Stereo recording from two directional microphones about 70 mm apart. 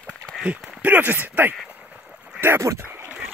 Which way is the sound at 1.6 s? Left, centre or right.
Right.